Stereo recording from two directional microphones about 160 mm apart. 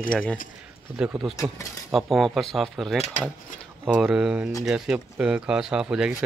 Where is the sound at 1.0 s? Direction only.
5° right (ahead or behind).